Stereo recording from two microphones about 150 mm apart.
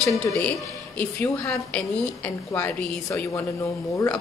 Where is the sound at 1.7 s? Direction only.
10° left (ahead or behind).